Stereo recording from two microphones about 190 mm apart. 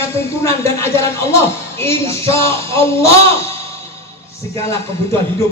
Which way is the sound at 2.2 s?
30° right (ahead or behind).